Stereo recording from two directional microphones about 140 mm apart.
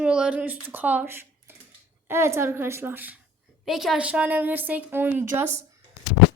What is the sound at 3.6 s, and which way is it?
A woman's voice, centre (ahead or behind).